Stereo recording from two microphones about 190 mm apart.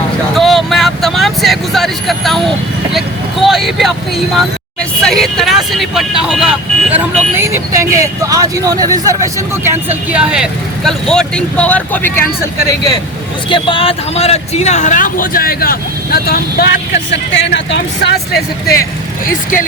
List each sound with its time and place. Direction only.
0.3 s vehicle: centre (ahead or behind)
3.4 s speech: centre (ahead or behind)
5.0 s speech: centre (ahead or behind); by 17.7 s 70° left (ahead or behind)
18.3 s speech: 50° left (ahead or behind)